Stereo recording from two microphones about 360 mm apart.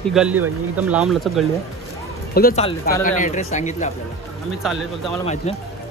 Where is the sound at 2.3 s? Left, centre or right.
Left.